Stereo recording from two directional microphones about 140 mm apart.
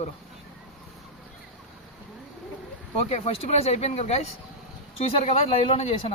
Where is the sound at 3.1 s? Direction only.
45° left (ahead or behind).